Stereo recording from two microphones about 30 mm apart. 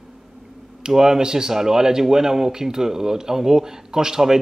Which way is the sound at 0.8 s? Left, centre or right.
Centre.